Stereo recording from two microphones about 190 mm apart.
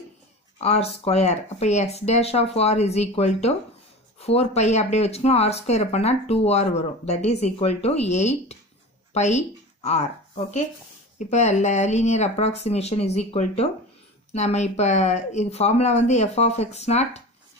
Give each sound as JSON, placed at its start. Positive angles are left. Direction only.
{"t": 0.6, "sound": "speech", "side_deg": 30}